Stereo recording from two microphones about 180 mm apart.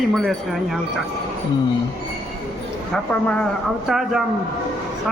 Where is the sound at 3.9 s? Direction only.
Centre (ahead or behind).